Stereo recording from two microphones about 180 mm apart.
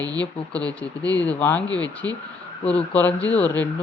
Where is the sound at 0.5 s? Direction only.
5° left (ahead or behind).